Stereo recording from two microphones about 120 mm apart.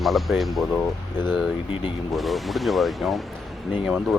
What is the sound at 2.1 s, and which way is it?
Speech, centre (ahead or behind).